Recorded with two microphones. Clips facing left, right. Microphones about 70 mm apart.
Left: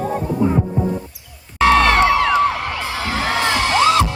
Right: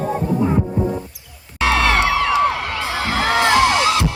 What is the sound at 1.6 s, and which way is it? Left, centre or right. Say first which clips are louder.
Music: left 4 dB; left.